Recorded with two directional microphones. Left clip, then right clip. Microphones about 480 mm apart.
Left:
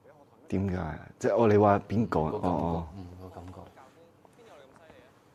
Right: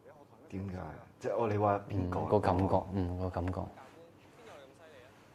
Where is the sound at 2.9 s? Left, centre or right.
Right.